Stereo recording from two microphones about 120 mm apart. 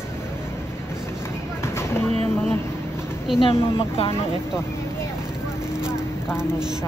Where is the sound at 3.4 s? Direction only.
50° left (ahead or behind).